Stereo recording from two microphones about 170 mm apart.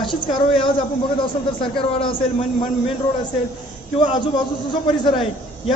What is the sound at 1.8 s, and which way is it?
Speech, 30° left (ahead or behind).